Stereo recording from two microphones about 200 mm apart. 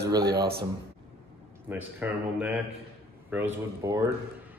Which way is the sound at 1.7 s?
10° right (ahead or behind).